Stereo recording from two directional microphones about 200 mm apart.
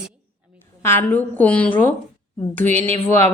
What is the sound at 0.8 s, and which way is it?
Speech, 10° left (ahead or behind).